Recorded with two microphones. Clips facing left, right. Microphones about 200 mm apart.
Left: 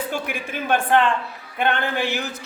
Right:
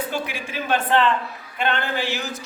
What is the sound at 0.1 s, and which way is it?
A man's voice, 55° left (ahead or behind).